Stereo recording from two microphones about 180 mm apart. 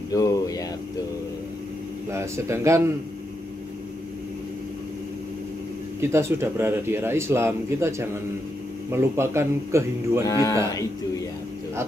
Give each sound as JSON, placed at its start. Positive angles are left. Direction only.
{"t": 0.1, "sound": "a sound", "side_deg": 20}
{"t": 2.0, "sound": "speech", "side_deg": -15}
{"t": 5.9, "sound": "speech", "side_deg": -15}
{"t": 10.2, "sound": "speech", "side_deg": 20}